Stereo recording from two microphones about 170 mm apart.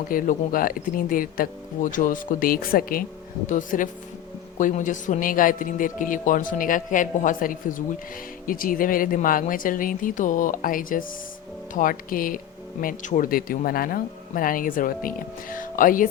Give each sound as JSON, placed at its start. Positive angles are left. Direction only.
{"t": 0.1, "sound": "a man's voice", "side_deg": 55}